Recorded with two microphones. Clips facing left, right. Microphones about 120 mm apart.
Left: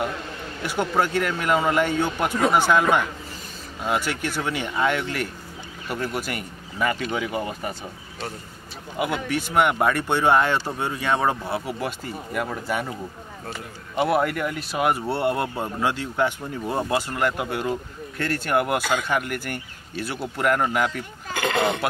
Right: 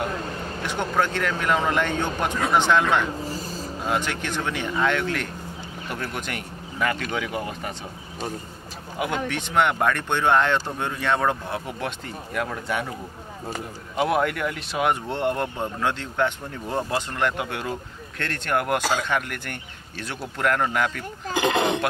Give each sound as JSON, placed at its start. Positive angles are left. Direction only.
{"t": 0.7, "sound": "speech", "side_deg": 5}
{"t": 9.0, "sound": "speech", "side_deg": 5}
{"t": 13.9, "sound": "speech", "side_deg": 0}
{"t": 21.3, "sound": "speech", "side_deg": -20}